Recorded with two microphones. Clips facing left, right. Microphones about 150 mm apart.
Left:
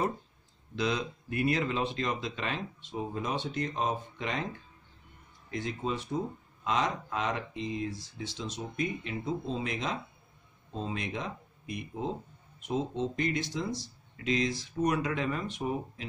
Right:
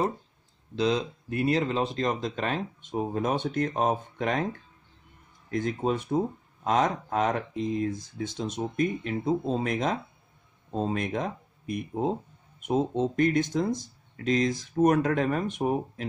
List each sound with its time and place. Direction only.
0.7 s speech: 35° right (ahead or behind); by 16.1 s 55° right (ahead or behind)